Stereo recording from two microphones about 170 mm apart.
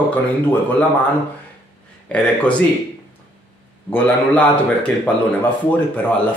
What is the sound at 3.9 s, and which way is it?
A man's voice, 10° left (ahead or behind).